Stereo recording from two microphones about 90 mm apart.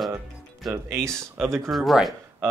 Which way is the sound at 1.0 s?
5° left (ahead or behind).